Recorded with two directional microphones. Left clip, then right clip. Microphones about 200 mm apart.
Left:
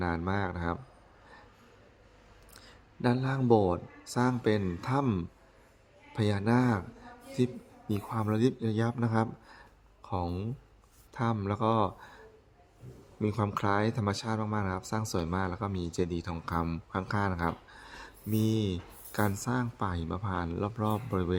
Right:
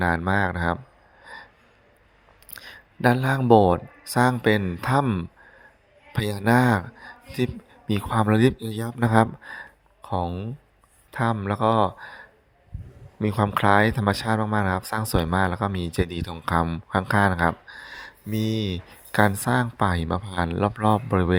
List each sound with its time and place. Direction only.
0.2 s speech: 25° right (ahead or behind)
2.5 s speech: 30° right (ahead or behind)
6.1 s speech: 30° right (ahead or behind)
8.6 s speech: centre (ahead or behind)
9.0 s speech: 30° right (ahead or behind)
10.2 s speech: 5° right (ahead or behind)
11.1 s speech: 20° right (ahead or behind)
13.2 s speech: 25° right (ahead or behind)